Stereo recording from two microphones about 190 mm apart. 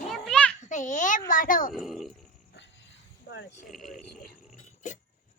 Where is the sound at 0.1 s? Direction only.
5° left (ahead or behind).